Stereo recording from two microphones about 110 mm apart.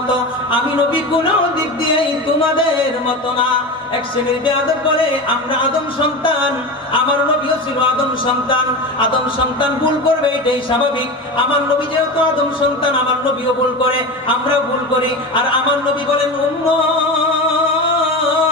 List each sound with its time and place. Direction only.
9.6 s speech: 50° left (ahead or behind)